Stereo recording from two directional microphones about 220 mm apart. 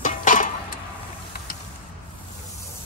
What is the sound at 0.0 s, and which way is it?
Music, 35° left (ahead or behind).